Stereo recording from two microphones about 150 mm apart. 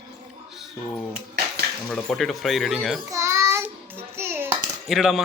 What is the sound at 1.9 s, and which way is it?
A child's voice, 5° left (ahead or behind).